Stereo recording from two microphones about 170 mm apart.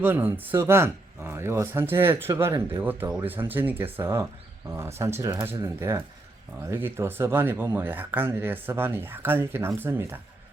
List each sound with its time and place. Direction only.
0.0 s speech: 10° right (ahead or behind)